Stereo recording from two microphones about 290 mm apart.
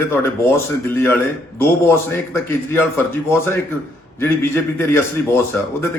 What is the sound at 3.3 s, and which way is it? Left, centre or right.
A man's voice, centre.